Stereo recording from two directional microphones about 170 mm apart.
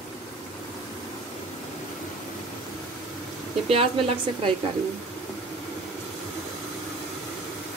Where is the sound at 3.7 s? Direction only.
35° right (ahead or behind).